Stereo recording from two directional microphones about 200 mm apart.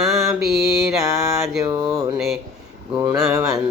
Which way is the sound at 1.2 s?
15° right (ahead or behind).